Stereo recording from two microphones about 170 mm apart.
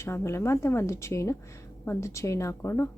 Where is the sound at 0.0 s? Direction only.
15° left (ahead or behind).